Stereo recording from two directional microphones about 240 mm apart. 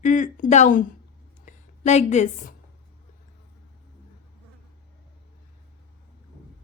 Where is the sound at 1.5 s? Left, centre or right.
Left.